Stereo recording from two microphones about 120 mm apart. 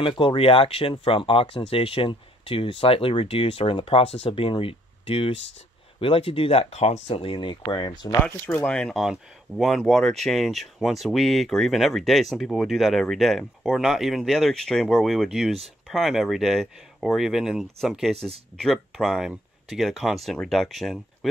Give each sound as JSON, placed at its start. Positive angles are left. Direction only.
{"t": 0.0, "sound": "speech", "side_deg": 45}
{"t": 8.1, "sound": "speech", "side_deg": 15}
{"t": 18.1, "sound": "speech", "side_deg": -55}
{"t": 18.6, "sound": "speech", "side_deg": 5}